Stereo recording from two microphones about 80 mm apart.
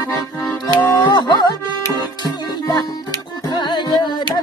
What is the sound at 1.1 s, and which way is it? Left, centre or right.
Music, left.